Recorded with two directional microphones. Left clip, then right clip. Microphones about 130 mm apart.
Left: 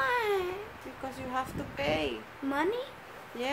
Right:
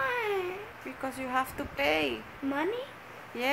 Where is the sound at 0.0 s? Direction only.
30° left (ahead or behind).